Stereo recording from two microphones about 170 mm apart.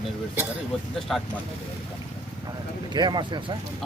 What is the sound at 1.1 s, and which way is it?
Speech, centre (ahead or behind).